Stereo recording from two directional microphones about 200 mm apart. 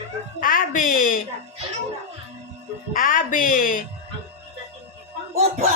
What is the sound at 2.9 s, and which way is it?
Music, 40° left (ahead or behind).